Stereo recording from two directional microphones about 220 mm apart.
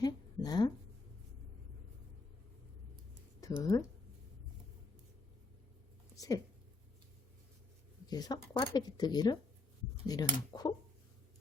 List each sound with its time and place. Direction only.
0.0 s a sound: 15° left (ahead or behind)
3.6 s speech: 15° left (ahead or behind)
6.1 s speech: 15° left (ahead or behind)
8.1 s speech: 20° left (ahead or behind)